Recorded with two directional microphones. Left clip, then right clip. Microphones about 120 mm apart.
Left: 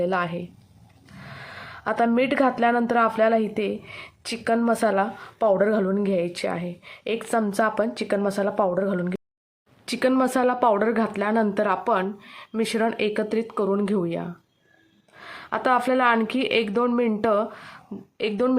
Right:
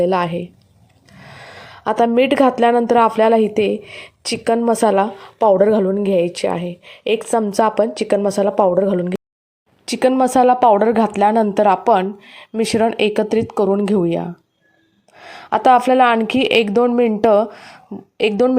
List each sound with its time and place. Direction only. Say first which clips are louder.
0.0 s speech: right 8 dB; 35° right (ahead or behind)
1.2 s a sound: right 2 dB; 35° right (ahead or behind)
2.1 s a woman's voice: right 8 dB; 40° right (ahead or behind)